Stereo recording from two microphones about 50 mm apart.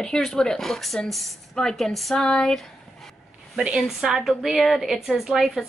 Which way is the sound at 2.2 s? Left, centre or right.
Centre.